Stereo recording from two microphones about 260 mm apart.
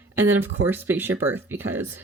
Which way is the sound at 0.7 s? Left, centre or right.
Centre.